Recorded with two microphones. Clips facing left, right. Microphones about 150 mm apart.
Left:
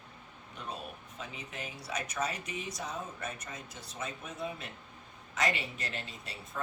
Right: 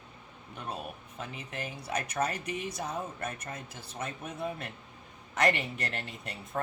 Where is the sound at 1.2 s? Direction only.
55° right (ahead or behind).